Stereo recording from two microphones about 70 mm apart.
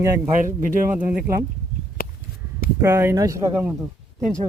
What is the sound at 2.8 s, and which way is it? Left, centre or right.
Speech, right.